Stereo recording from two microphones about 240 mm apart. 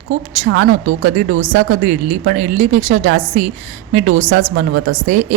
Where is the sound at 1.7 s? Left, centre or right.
Right.